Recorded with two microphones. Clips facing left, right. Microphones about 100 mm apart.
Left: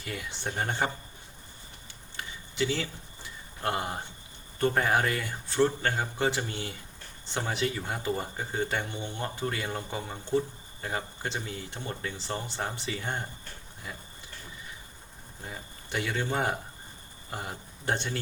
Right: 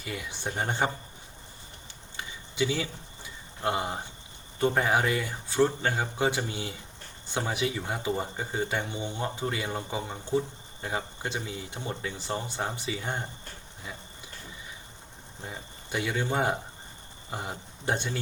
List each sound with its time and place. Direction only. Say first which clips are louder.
0.0 s speech: right 1 dB; 5° right (ahead or behind)
0.5 s speech: right 2 dB; 15° right (ahead or behind)
2.1 s a sound: right 2 dB; 10° right (ahead or behind)
3.6 s speech: right 2 dB; 5° right (ahead or behind)
15.4 s speech: right 1 dB; 10° right (ahead or behind)